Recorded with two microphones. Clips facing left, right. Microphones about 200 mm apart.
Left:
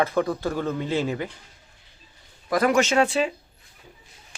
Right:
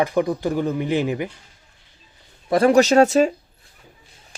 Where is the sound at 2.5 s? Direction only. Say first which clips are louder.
Right 6 dB; 30° right (ahead or behind).